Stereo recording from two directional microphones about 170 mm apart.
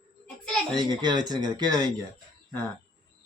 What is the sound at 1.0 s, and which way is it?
Speech, 25° right (ahead or behind).